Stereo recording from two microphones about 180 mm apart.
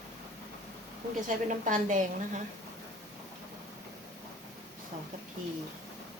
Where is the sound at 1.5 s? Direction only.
45° right (ahead or behind).